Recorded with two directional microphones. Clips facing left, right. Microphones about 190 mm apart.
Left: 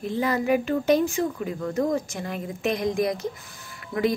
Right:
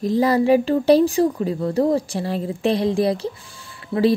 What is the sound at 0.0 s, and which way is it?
A woman's voice, 35° right (ahead or behind).